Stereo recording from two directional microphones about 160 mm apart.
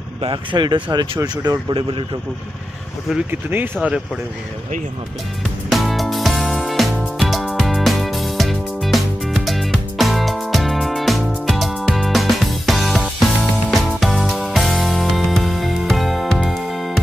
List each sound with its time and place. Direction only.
0.2 s speech: 30° right (ahead or behind)
3.3 s speech: 10° right (ahead or behind)
5.7 s music: centre (ahead or behind)